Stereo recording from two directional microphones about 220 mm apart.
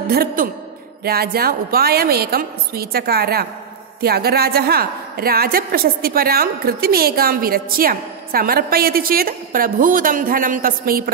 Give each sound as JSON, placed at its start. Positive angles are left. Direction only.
{"t": 0.1, "sound": "a woman's voice", "side_deg": -45}